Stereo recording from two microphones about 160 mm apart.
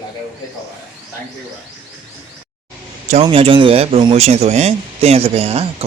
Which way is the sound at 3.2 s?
35° right (ahead or behind).